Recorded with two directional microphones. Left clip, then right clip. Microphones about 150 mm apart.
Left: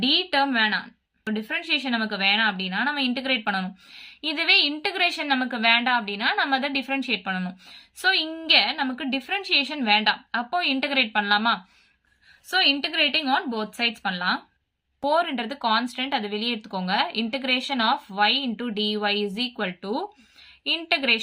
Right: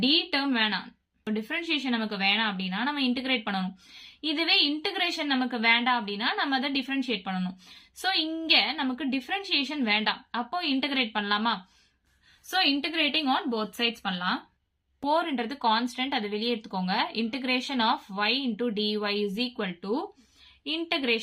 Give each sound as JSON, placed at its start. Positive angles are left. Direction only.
{"t": 0.0, "sound": "speech", "side_deg": 15}